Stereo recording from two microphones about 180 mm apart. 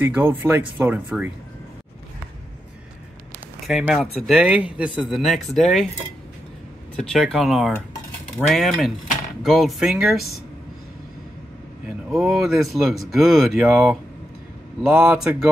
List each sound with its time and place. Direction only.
0.0 s speech: 10° right (ahead or behind)
3.6 s speech: centre (ahead or behind)
7.0 s speech: 5° left (ahead or behind)
12.1 s speech: centre (ahead or behind)